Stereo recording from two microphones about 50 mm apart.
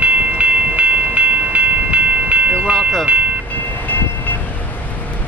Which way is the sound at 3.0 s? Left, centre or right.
Right.